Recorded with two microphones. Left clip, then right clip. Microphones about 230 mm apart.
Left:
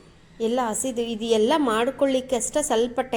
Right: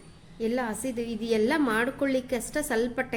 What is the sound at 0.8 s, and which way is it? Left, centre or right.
Speech, right.